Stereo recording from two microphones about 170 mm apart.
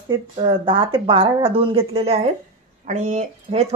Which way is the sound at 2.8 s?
45° right (ahead or behind).